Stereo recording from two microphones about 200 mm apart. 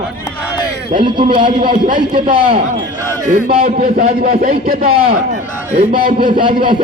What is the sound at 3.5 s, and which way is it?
Speech, 45° right (ahead or behind).